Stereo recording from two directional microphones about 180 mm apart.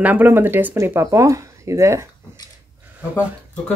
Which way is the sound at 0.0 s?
10° right (ahead or behind).